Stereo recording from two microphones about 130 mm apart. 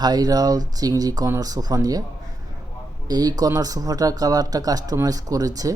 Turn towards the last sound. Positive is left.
turn(degrees=-30)  # may be behind; listen again after turning